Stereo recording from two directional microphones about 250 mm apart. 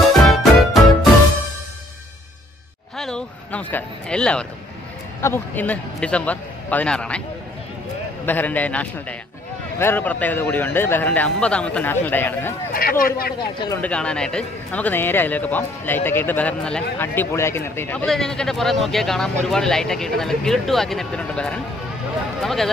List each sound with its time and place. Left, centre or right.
0.0 s music: centre
3.0 s a man's voice: centre
8.3 s speech: centre
12.7 s speech: left
13.6 s speech: centre